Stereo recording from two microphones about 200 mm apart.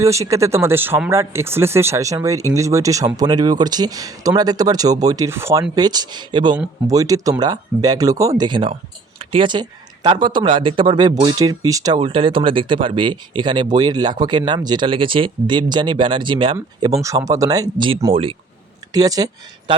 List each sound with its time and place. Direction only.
0.0 s speech: 15° right (ahead or behind)